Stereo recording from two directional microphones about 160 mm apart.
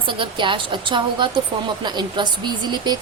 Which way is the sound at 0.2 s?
30° right (ahead or behind).